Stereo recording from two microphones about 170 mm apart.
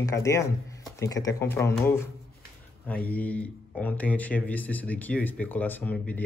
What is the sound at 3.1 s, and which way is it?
Speech, 10° left (ahead or behind).